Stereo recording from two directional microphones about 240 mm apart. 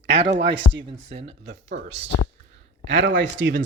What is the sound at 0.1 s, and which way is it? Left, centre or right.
Speech, right.